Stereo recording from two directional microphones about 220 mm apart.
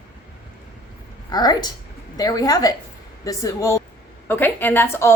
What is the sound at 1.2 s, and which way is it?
A woman's voice, 20° left (ahead or behind).